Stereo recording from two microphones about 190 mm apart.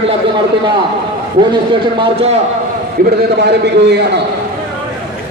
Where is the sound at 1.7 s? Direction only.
25° right (ahead or behind).